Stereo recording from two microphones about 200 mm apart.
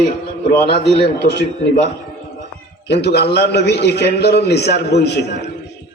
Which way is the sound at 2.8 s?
55° left (ahead or behind).